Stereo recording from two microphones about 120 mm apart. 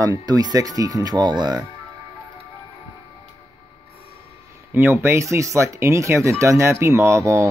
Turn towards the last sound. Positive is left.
turn(degrees=-25)  # may be behind; listen again after turning